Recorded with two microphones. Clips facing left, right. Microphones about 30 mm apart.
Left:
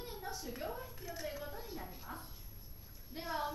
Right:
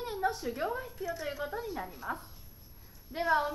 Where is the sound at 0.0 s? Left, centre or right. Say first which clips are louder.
Right 12 dB; right.